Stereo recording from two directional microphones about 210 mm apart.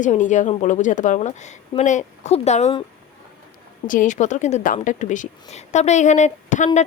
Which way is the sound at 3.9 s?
35° left (ahead or behind).